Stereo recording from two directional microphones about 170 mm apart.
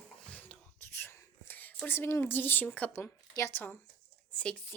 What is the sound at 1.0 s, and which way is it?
A woman's voice, 10° left (ahead or behind).